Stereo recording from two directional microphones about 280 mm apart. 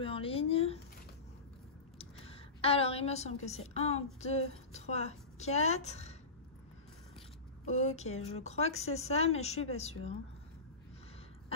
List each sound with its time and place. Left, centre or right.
0.0 s speech: centre
2.0 s a woman's voice: left
7.6 s speech: left